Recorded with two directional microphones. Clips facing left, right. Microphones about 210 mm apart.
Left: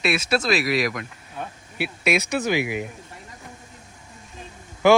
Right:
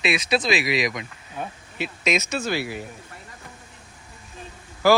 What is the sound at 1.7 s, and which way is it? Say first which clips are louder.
Speech: left 2 dB; 10° left (ahead or behind).